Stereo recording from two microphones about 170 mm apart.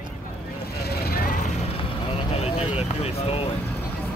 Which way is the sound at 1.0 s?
55° left (ahead or behind).